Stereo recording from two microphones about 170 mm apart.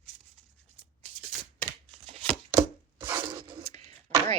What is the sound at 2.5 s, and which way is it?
Chopping, 15° right (ahead or behind).